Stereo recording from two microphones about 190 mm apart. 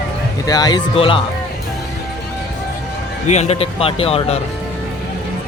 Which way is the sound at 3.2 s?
35° left (ahead or behind).